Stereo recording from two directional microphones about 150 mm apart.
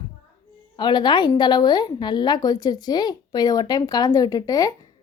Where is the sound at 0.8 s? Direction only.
30° left (ahead or behind).